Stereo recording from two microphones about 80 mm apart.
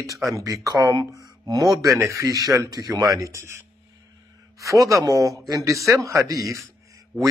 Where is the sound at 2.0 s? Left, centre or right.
Right.